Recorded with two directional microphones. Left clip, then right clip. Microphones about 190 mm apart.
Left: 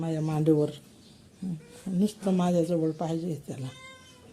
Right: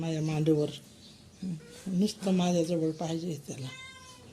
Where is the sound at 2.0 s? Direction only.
15° left (ahead or behind).